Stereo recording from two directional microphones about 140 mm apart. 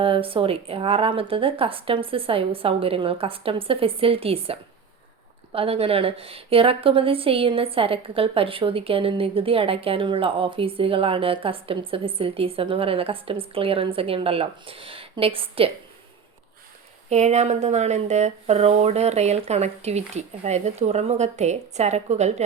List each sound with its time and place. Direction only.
0.0 s a woman's voice: 40° right (ahead or behind)
17.1 s speech: 55° right (ahead or behind)